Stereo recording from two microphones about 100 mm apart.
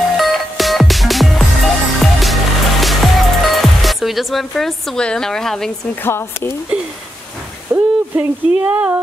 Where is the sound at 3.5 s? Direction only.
Centre (ahead or behind).